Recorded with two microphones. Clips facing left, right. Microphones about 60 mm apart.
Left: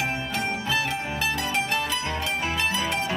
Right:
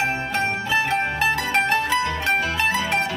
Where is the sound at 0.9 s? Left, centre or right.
Right.